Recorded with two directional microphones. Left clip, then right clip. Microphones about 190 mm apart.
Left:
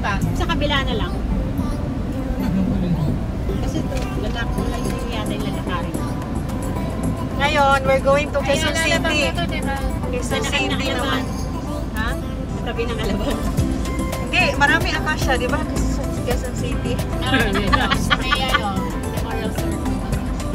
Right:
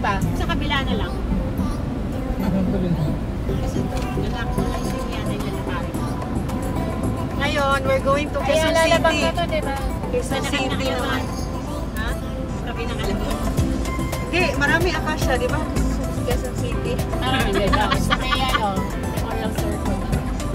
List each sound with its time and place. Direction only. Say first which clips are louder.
7.3 s vehicle: left 5 dB; 10° right (ahead or behind)
8.5 s speech: right 3 dB; 50° right (ahead or behind)
14.3 s speech: left 3 dB; 10° right (ahead or behind)